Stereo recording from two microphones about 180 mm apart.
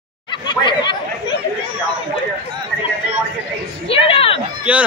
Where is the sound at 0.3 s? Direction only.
25° left (ahead or behind).